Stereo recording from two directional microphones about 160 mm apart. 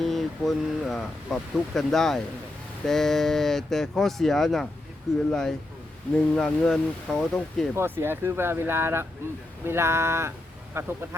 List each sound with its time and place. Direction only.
0.0 s speech: centre (ahead or behind)
7.8 s speech: 15° right (ahead or behind)